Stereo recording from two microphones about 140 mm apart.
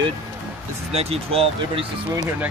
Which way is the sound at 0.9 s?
45° right (ahead or behind).